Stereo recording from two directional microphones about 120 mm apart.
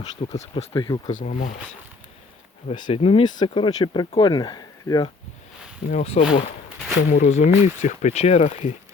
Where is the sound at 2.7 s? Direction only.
45° left (ahead or behind); by 5.1 s 30° left (ahead or behind).